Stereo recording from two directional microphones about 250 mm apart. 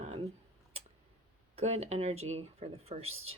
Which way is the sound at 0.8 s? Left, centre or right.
Right.